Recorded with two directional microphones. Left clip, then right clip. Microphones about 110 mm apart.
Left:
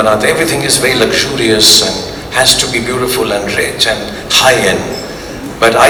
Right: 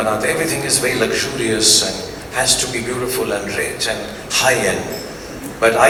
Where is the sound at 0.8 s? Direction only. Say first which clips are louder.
Left 7 dB; 20° left (ahead or behind).